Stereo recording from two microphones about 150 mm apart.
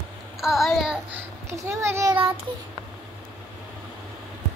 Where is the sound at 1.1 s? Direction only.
20° right (ahead or behind).